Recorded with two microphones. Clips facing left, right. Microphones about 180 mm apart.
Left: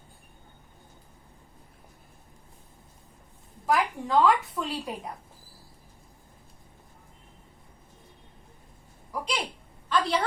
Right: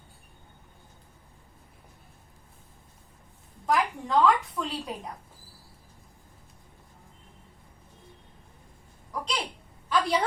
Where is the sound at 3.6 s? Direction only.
Centre (ahead or behind).